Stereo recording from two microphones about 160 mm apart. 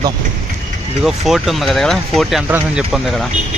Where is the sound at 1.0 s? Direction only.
Centre (ahead or behind).